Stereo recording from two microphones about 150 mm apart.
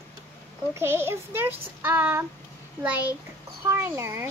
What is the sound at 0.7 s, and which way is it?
A child's voice, 15° right (ahead or behind).